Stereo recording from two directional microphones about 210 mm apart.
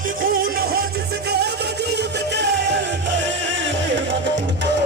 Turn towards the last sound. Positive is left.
turn(degrees=-60)  # may be behind; listen again after turning